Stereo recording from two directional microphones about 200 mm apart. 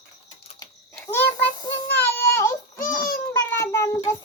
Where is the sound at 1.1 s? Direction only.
10° left (ahead or behind).